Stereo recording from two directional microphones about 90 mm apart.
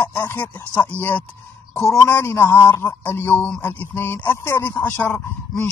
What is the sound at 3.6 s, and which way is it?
Speech, 20° left (ahead or behind).